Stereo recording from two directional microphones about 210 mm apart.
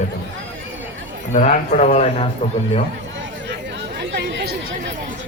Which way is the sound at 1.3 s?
35° left (ahead or behind).